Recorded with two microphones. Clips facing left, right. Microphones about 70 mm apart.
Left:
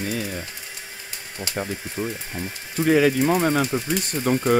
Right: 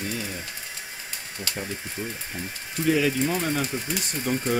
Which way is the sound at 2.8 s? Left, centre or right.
Left.